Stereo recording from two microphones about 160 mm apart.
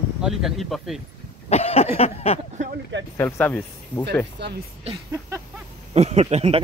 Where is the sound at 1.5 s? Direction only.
40° left (ahead or behind).